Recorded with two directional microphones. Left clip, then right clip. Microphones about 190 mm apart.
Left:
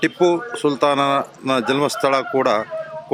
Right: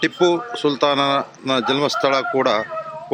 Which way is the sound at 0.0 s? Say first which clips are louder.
Even; 10° left (ahead or behind).